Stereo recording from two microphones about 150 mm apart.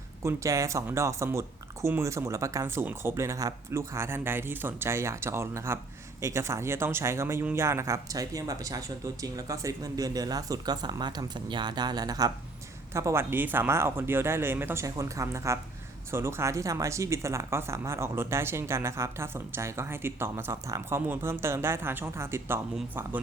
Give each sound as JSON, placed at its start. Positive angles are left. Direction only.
{"t": 0.2, "sound": "speech", "side_deg": -20}